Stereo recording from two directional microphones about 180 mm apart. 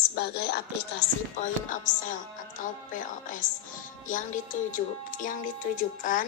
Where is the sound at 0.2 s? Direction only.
65° left (ahead or behind).